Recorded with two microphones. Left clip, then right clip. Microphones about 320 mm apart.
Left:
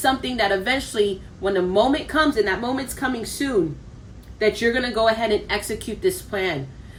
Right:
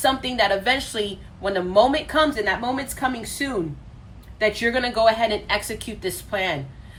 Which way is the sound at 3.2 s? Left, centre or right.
Left.